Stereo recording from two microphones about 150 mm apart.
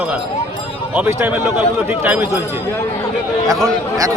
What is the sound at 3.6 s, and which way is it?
Speech, 20° right (ahead or behind).